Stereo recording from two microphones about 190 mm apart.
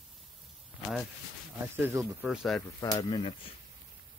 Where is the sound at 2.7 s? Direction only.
20° left (ahead or behind).